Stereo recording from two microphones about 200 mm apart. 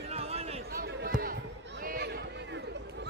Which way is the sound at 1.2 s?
45° right (ahead or behind).